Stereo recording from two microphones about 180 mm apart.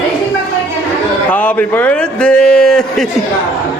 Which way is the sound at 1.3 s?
10° left (ahead or behind).